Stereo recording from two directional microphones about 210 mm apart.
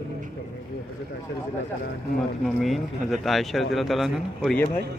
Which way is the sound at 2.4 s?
Centre (ahead or behind).